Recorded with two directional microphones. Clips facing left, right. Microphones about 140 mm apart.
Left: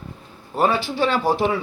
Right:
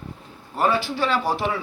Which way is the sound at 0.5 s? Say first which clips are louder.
Left 2 dB; 25° left (ahead or behind).